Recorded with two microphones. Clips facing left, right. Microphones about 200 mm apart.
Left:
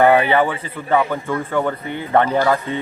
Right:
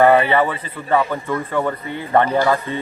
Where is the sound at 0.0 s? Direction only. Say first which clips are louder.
Even; 5° left (ahead or behind).